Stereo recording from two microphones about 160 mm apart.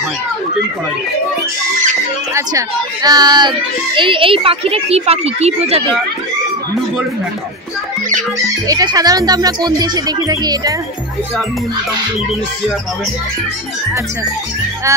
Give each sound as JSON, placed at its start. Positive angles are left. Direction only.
{"t": 2.3, "sound": "a child's voice", "side_deg": -20}
{"t": 8.4, "sound": "speech", "side_deg": -25}
{"t": 14.9, "sound": "speech", "side_deg": -20}